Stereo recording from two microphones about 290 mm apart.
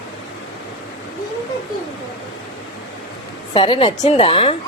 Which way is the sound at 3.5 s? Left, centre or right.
Centre.